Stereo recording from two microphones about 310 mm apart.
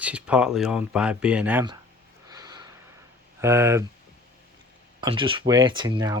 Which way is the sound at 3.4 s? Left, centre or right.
Centre.